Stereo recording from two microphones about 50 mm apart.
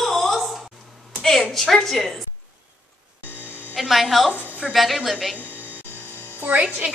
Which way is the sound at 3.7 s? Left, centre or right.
Centre.